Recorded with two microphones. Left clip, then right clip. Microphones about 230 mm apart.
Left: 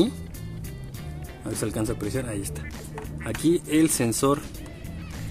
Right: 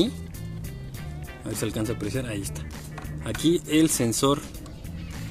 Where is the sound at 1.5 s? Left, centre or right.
Centre.